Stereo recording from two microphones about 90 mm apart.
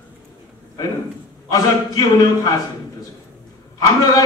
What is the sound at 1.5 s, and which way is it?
A man's voice, 45° left (ahead or behind).